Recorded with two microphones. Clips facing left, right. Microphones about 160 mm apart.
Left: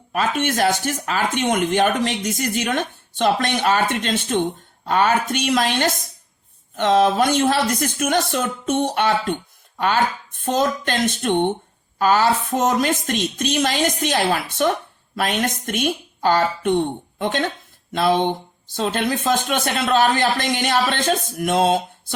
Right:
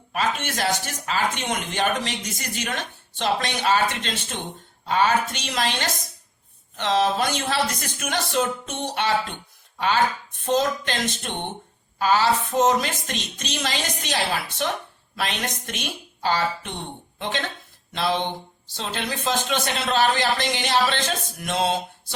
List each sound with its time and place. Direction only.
0.1 s speech: 50° left (ahead or behind)